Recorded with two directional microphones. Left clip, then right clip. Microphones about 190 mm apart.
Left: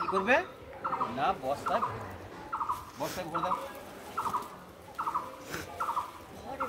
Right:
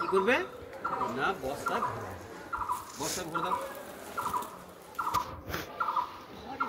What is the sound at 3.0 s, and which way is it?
Speech, 5° left (ahead or behind).